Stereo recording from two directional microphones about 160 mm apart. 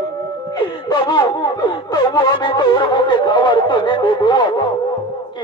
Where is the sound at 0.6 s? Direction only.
25° left (ahead or behind).